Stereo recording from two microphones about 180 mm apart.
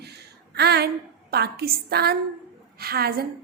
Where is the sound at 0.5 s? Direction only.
65° right (ahead or behind).